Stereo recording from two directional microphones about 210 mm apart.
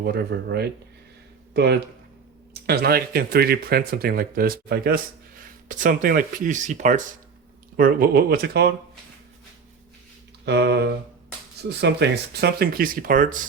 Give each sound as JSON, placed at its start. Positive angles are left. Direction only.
{"t": 0.0, "sound": "speech", "side_deg": -50}
{"t": 10.4, "sound": "speech", "side_deg": -50}